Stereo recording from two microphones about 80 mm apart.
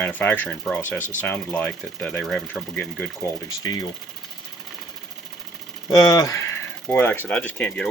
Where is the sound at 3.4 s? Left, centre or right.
Left.